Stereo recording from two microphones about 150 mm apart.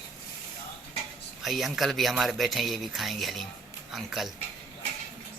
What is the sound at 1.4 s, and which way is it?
Speech, centre (ahead or behind).